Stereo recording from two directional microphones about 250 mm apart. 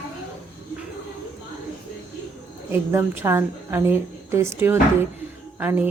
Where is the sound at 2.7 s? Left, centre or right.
Centre.